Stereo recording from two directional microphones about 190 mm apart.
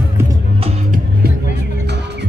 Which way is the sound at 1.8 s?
60° right (ahead or behind).